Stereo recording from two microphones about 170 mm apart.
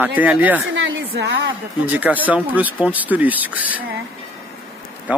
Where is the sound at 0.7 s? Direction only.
90° right.